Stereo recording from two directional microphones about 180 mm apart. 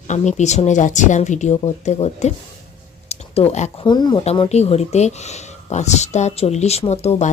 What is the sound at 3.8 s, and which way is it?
A woman's voice, 25° left (ahead or behind).